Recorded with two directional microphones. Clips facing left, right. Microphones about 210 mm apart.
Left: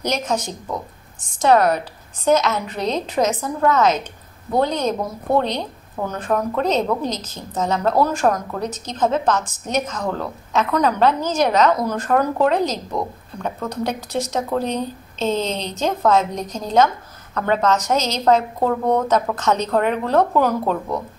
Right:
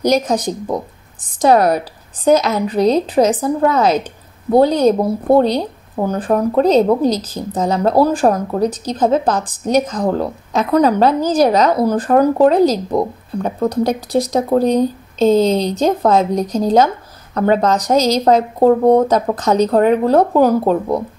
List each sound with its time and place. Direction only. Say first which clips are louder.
0.0 s a woman's voice: right 8 dB; 35° right (ahead or behind)